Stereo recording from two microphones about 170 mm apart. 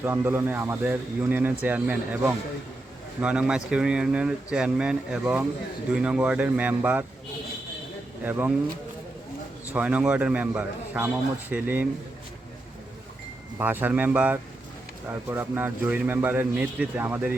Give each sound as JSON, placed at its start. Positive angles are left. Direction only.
{"t": 0.0, "sound": "a man's voice", "side_deg": -15}
{"t": 8.2, "sound": "a man's voice", "side_deg": -10}
{"t": 9.7, "sound": "a man's voice", "side_deg": -10}
{"t": 13.6, "sound": "a man's voice", "side_deg": -10}